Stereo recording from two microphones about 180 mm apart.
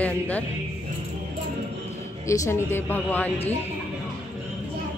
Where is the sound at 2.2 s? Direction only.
15° left (ahead or behind).